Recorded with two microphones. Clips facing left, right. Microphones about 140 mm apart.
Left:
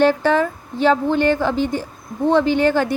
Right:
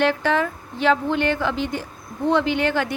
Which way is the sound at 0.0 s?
35° left (ahead or behind).